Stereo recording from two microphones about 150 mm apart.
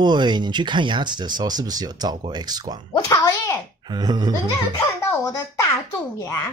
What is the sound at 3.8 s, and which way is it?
Speech, 30° right (ahead or behind).